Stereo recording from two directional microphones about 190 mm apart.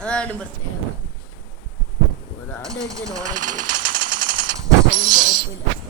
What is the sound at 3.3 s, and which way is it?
Speech, 40° right (ahead or behind).